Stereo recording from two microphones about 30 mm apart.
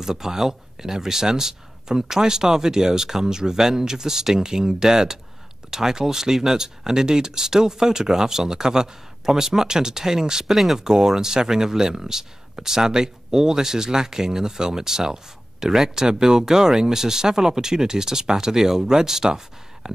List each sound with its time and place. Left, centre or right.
0.0 s speech: centre
10.5 s speech: centre
10.8 s speech: centre